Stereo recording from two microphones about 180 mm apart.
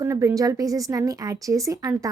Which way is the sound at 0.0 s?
15° right (ahead or behind).